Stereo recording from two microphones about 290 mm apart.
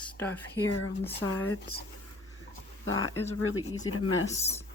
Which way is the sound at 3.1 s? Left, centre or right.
Centre.